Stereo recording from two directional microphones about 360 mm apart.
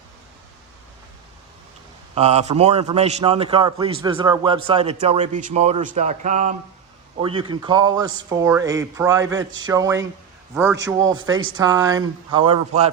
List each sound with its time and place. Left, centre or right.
2.1 s a man's voice: centre